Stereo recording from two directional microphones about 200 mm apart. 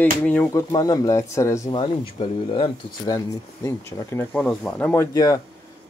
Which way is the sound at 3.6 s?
15° left (ahead or behind).